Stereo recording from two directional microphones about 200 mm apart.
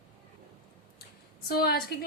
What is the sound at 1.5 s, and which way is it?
Speech, 50° left (ahead or behind).